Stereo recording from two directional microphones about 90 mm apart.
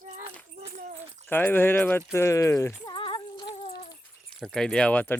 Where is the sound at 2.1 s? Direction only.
35° left (ahead or behind).